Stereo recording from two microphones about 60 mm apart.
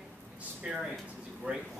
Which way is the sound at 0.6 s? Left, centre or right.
Centre.